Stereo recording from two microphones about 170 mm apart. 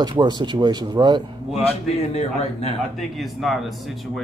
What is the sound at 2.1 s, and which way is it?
Speech, 35° left (ahead or behind).